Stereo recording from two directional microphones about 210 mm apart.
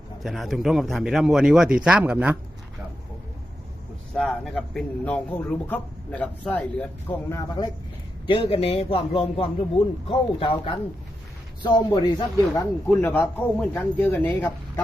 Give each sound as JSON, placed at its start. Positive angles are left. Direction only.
{"t": 0.2, "sound": "speech", "side_deg": 0}
{"t": 4.1, "sound": "speech", "side_deg": 5}
{"t": 8.3, "sound": "speech", "side_deg": 25}
{"t": 12.5, "sound": "speech", "side_deg": 10}